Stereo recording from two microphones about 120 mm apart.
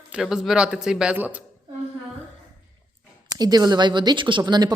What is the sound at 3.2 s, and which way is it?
Speech, 35° right (ahead or behind).